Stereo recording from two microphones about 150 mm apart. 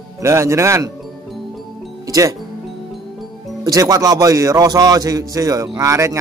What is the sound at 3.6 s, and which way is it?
A man's voice, 25° right (ahead or behind).